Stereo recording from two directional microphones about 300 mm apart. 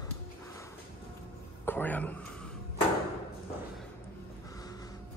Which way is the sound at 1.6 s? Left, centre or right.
Centre.